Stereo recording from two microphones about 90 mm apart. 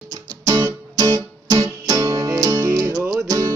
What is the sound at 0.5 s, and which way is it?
Music, 45° right (ahead or behind).